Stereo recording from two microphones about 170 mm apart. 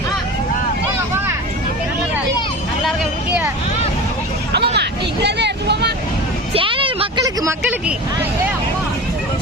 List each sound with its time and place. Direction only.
2.8 s vehicle: centre (ahead or behind)
4.5 s hubbub: 85° right
6.5 s a sound: 30° right (ahead or behind)